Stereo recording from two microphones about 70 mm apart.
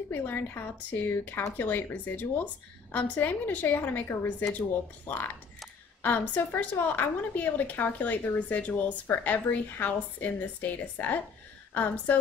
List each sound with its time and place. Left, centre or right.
0.1 s a woman's voice: left